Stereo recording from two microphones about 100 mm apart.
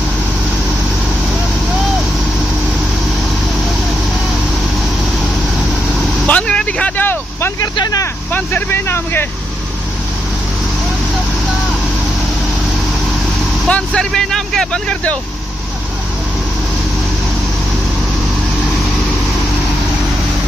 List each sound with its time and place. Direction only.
6.2 s vehicle: 10° left (ahead or behind)
7.6 s a sound: 40° left (ahead or behind)
8.3 s vehicle: 15° left (ahead or behind)
13.7 s vehicle: 10° left (ahead or behind)